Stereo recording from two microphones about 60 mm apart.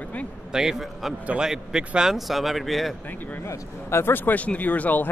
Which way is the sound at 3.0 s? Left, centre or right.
Left.